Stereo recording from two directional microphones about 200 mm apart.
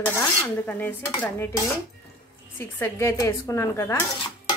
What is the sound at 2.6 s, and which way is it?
A woman's voice, 10° left (ahead or behind).